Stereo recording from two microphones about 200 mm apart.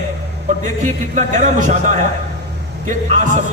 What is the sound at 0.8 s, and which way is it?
Music, 40° right (ahead or behind).